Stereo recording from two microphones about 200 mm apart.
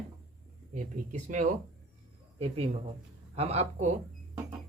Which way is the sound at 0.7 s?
40° right (ahead or behind).